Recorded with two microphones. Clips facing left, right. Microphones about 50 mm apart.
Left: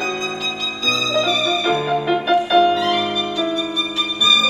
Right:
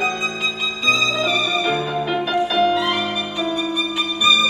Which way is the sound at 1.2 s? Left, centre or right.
Centre.